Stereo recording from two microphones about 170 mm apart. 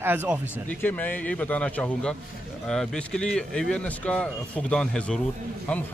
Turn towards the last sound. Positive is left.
turn(degrees=5)  # may be behind; listen again after turning